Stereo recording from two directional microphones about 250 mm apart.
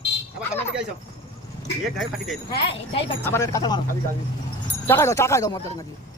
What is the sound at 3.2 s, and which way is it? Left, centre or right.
Speech, centre.